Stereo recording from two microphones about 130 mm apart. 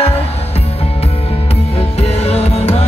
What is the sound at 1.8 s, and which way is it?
Music, 50° left (ahead or behind).